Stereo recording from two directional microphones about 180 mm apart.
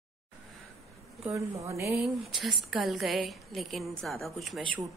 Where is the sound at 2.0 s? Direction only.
Centre (ahead or behind).